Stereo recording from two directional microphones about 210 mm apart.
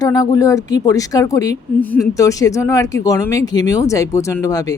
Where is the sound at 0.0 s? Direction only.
15° left (ahead or behind).